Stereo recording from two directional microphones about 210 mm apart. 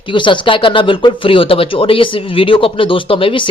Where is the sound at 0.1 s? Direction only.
20° left (ahead or behind).